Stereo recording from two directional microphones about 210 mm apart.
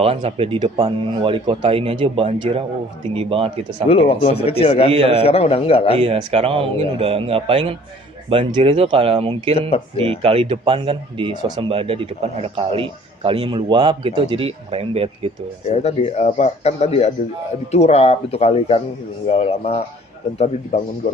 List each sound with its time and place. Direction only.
0.0 s speech: 30° right (ahead or behind)
3.8 s speech: 25° left (ahead or behind)
4.9 s speech: 30° right (ahead or behind)
5.2 s speech: 30° left (ahead or behind)
6.0 s speech: 30° right (ahead or behind)
9.6 s speech: 30° left (ahead or behind)
10.0 s speech: 25° right (ahead or behind)
15.6 s speech: 30° left (ahead or behind)